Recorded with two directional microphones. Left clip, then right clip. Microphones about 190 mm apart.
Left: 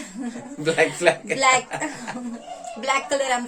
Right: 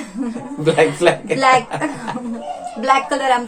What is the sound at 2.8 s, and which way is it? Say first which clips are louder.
Speech: right 7 dB; 15° left (ahead or behind).